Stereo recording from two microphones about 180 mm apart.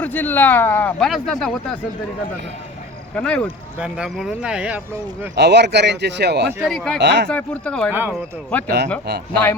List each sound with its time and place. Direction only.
0.0 s speech: 10° left (ahead or behind)
3.2 s speech: 5° left (ahead or behind)
3.8 s speech: 5° right (ahead or behind)
5.3 s speech: 70° right (ahead or behind)
6.6 s speech: centre (ahead or behind)
7.0 s speech: 70° right (ahead or behind)
7.3 s speech: 5° left (ahead or behind)